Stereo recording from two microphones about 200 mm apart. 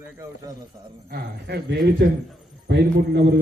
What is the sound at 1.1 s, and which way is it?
A man's voice, 55° right (ahead or behind).